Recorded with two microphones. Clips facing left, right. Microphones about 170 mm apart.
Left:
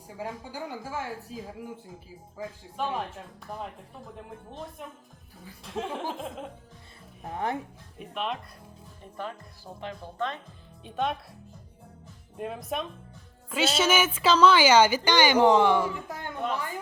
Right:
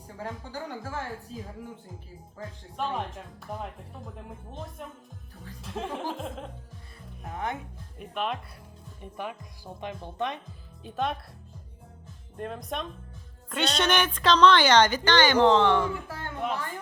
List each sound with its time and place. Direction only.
0.2 s a woman's voice: 10° left (ahead or behind)
2.4 s speech: centre (ahead or behind)
4.8 s speech: centre (ahead or behind)
7.3 s speech: 35° left (ahead or behind)
7.9 s speech: centre (ahead or behind)
9.8 s speech: 15° right (ahead or behind)
10.8 s speech: centre (ahead or behind)
12.4 s a woman's voice: 5° left (ahead or behind)